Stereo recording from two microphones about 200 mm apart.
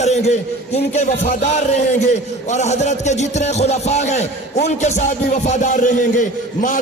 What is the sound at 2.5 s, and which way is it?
A man's voice, 35° left (ahead or behind).